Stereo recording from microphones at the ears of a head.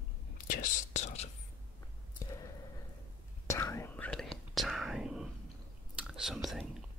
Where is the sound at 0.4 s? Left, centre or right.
Left.